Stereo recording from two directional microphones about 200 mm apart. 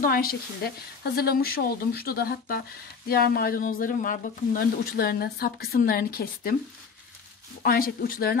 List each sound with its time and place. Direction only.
0.0 s speech: 45° left (ahead or behind)
7.6 s speech: 45° left (ahead or behind)